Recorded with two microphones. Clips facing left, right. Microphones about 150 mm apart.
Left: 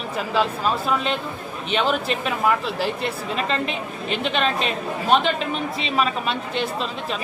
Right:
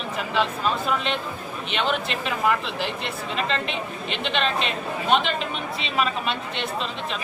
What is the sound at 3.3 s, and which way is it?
Speech, 40° left (ahead or behind).